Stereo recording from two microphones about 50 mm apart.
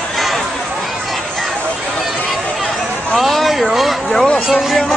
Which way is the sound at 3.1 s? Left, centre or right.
Centre.